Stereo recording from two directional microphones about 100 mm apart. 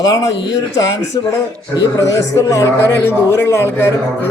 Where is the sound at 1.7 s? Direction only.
30° left (ahead or behind).